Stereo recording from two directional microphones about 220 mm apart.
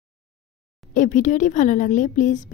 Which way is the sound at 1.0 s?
35° left (ahead or behind).